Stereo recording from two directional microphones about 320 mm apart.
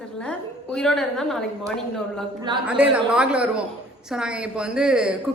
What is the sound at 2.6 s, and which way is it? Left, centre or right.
A woman's voice, centre.